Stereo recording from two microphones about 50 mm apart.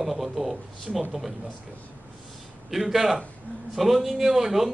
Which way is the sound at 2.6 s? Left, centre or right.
Centre.